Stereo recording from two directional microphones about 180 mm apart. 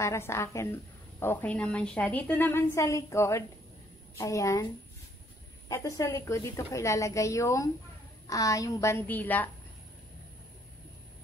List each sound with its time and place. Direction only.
0.0 s a woman's voice: 15° left (ahead or behind)
5.7 s a woman's voice: 15° left (ahead or behind)